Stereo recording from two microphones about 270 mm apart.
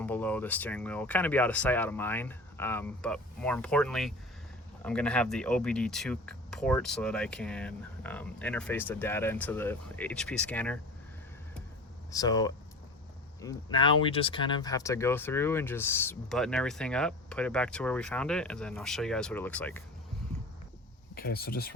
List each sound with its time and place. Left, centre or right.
0.0 s speech: centre
12.1 s speech: centre
21.2 s speech: left